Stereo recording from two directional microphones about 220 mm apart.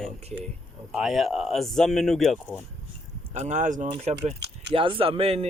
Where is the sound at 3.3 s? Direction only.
35° right (ahead or behind).